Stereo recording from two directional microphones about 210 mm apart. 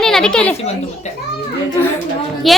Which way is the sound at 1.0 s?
35° left (ahead or behind).